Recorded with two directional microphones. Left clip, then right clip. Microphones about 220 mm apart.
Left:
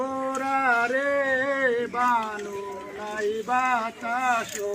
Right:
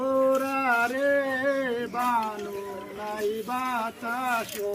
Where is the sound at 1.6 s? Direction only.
15° right (ahead or behind).